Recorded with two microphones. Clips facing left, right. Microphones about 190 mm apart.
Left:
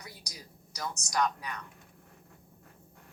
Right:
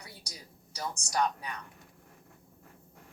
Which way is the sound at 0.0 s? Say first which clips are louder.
Left 1 dB; 30° right (ahead or behind).